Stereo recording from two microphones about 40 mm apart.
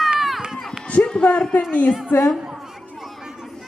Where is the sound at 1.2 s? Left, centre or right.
Left.